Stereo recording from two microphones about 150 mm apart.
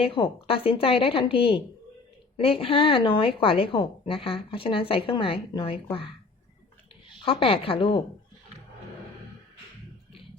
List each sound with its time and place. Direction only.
0.0 s a woman's voice: 35° left (ahead or behind)
7.3 s a woman's voice: 40° left (ahead or behind)